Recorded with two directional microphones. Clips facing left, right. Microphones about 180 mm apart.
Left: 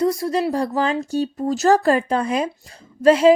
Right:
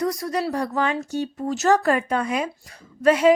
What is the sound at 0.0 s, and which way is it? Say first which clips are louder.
A woman's voice: left 5 dB; 25° left (ahead or behind).